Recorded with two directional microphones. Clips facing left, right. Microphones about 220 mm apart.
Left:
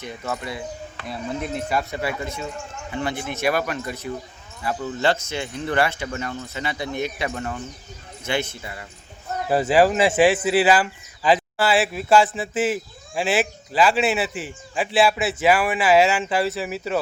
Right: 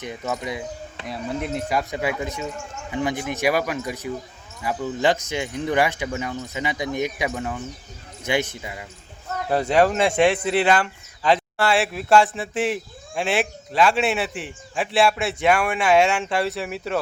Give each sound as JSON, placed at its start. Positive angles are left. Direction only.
{"t": 0.0, "sound": "speech", "side_deg": -15}
{"t": 9.5, "sound": "speech", "side_deg": 5}